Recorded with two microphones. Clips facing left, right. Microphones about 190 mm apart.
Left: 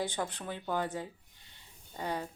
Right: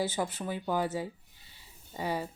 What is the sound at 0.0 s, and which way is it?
Speech, 5° right (ahead or behind).